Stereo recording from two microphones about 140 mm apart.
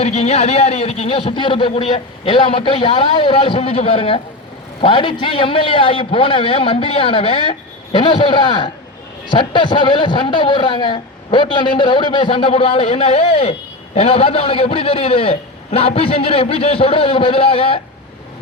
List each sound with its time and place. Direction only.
0.0 s a man's voice: 50° left (ahead or behind)